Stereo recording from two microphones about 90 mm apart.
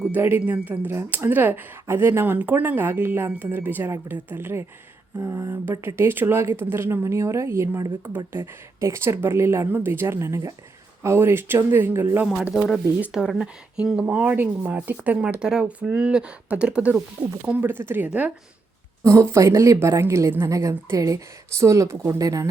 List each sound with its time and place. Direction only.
0.1 s speech: 20° right (ahead or behind)
12.5 s speech: 5° left (ahead or behind)
13.1 s speech: 5° right (ahead or behind)
19.0 s a woman's voice: 30° right (ahead or behind)